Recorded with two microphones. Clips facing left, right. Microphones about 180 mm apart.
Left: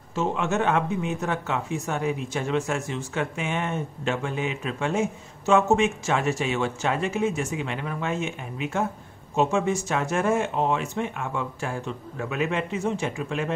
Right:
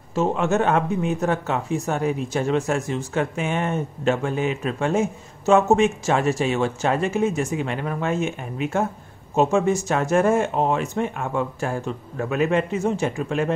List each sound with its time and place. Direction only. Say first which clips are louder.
0.1 s speech: right 4 dB; 40° right (ahead or behind)